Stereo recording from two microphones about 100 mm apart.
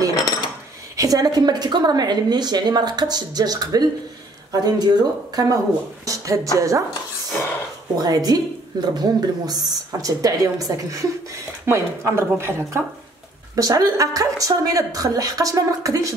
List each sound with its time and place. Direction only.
0.1 s a sound: 45° left (ahead or behind)
0.9 s a woman's voice: 35° right (ahead or behind)
7.9 s a woman's voice: 40° right (ahead or behind)
13.6 s a woman's voice: 35° right (ahead or behind)